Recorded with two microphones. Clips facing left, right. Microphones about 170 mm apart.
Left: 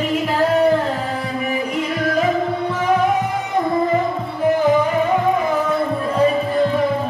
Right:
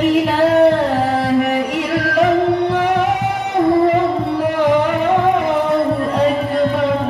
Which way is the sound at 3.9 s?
70° right (ahead or behind).